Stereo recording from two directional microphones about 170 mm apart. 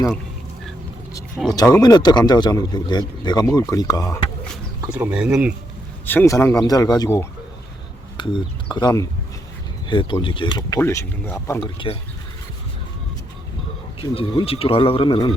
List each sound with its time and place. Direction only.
1.4 s speech: centre (ahead or behind)
1.8 s speech: 25° left (ahead or behind)
4.9 s speech: 5° right (ahead or behind)
6.1 s speech: 15° left (ahead or behind)
10.8 s speech: 15° left (ahead or behind)
11.6 s speech: 30° left (ahead or behind)
14.0 s speech: 30° left (ahead or behind)